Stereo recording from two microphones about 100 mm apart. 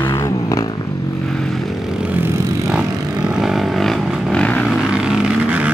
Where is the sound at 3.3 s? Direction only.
5° right (ahead or behind); by 4.7 s 10° left (ahead or behind).